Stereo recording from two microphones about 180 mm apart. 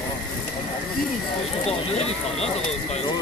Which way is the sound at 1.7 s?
35° left (ahead or behind).